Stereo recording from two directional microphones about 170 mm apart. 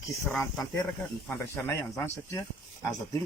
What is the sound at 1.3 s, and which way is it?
Speech, 15° left (ahead or behind).